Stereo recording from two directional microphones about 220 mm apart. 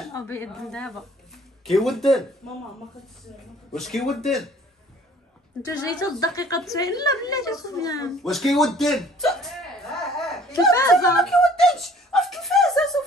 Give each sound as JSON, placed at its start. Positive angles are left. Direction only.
{"t": 0.1, "sound": "speech", "side_deg": 10}
{"t": 3.7, "sound": "a man's voice", "side_deg": 0}
{"t": 5.6, "sound": "a woman's voice", "side_deg": 15}
{"t": 8.2, "sound": "a man's voice", "side_deg": 0}
{"t": 10.5, "sound": "a woman's voice", "side_deg": 15}
{"t": 11.1, "sound": "a sound", "side_deg": 0}